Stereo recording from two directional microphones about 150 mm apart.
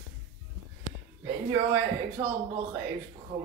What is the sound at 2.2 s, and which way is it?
Speech, 20° right (ahead or behind).